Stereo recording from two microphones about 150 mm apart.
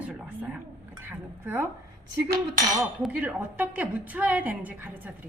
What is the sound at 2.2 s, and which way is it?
Cutlery, 75° right (ahead or behind).